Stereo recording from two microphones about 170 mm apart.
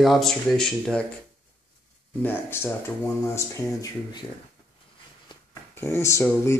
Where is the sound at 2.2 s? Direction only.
15° left (ahead or behind).